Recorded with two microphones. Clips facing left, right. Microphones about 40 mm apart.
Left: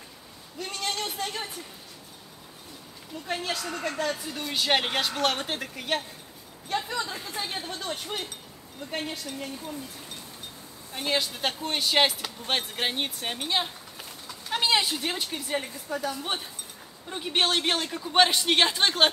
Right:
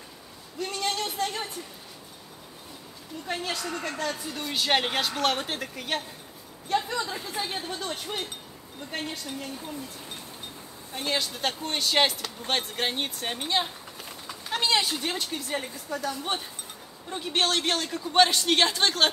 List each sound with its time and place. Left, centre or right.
0.6 s a sound: centre
3.3 s speech: centre
11.0 s speech: centre
17.1 s speech: centre